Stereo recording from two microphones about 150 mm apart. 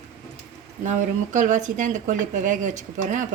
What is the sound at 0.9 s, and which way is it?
Speech, 55° right (ahead or behind).